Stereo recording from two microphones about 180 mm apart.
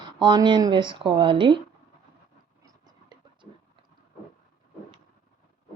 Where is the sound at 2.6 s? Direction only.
25° right (ahead or behind).